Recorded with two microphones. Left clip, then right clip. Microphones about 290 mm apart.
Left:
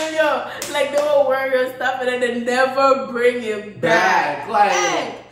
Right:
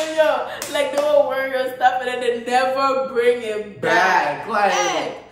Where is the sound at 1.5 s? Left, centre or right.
Centre.